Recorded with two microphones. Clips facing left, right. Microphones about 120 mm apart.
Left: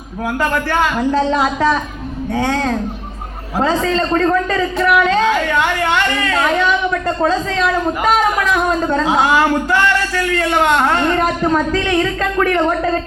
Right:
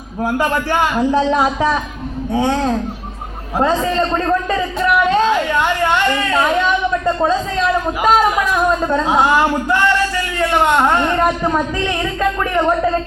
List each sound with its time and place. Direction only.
0.3 s a man's voice: 15° right (ahead or behind)
2.3 s a man's voice: 10° right (ahead or behind)
3.9 s a man's voice: 15° right (ahead or behind)
7.3 s a man's voice: 75° left (ahead or behind)
8.0 s a man's voice: 5° right (ahead or behind)
10.3 s a man's voice: 10° right (ahead or behind)